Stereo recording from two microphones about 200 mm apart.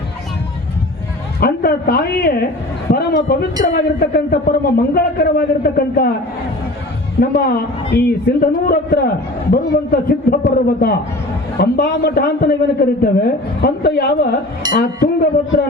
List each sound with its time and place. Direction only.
1.4 s a man's voice: 50° left (ahead or behind)
7.2 s a man's voice: 50° left (ahead or behind)